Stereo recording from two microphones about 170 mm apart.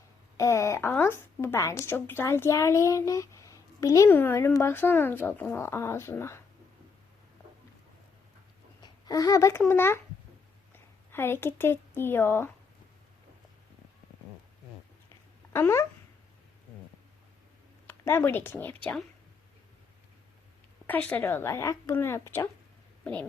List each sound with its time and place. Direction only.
0.3 s speech: 20° left (ahead or behind)
8.8 s a child's voice: 20° left (ahead or behind)
11.1 s speech: 15° left (ahead or behind)
15.5 s speech: 15° left (ahead or behind)
17.8 s speech: 15° left (ahead or behind)
20.8 s speech: 10° left (ahead or behind)